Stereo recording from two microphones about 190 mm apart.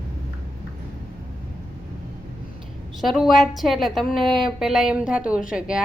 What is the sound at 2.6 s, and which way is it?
A woman's voice, centre (ahead or behind).